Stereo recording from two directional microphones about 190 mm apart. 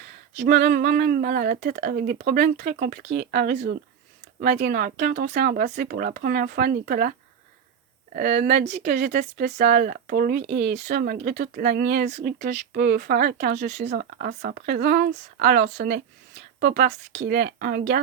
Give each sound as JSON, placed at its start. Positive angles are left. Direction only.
{"t": 0.3, "sound": "speech", "side_deg": -65}
{"t": 8.1, "sound": "speech", "side_deg": -60}
{"t": 13.7, "sound": "speech", "side_deg": -40}
{"t": 13.9, "sound": "speech", "side_deg": -50}